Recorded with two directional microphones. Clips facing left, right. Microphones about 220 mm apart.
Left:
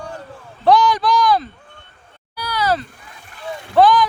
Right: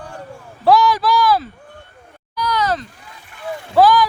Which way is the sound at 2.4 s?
10° left (ahead or behind).